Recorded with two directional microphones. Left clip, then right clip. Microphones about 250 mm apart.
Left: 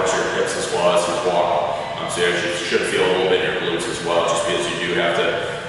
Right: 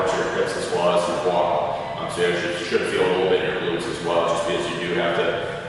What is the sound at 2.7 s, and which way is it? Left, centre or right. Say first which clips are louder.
Speech: left 2 dB; centre.